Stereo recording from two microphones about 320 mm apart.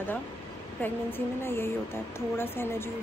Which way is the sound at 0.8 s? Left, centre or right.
Centre.